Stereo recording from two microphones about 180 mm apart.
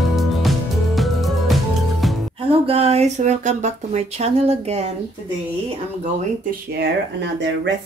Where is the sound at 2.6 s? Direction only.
35° right (ahead or behind).